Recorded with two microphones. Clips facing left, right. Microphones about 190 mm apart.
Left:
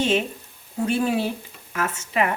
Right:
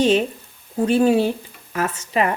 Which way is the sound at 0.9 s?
30° right (ahead or behind).